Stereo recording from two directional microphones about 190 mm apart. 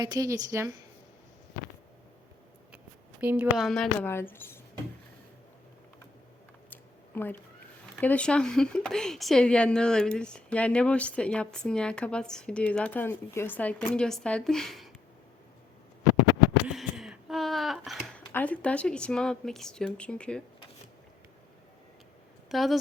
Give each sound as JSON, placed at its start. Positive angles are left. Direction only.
{"t": 0.0, "sound": "a woman's voice", "side_deg": -20}
{"t": 2.7, "sound": "speech", "side_deg": -5}
{"t": 4.1, "sound": "speech", "side_deg": 10}
{"t": 6.7, "sound": "a sound", "side_deg": 10}
{"t": 7.9, "sound": "speech", "side_deg": 5}
{"t": 16.6, "sound": "a sound", "side_deg": 0}
{"t": 18.3, "sound": "speech", "side_deg": 10}
{"t": 22.4, "sound": "speech", "side_deg": 0}